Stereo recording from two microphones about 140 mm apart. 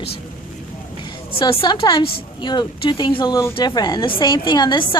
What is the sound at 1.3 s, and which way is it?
A woman's voice, 40° left (ahead or behind).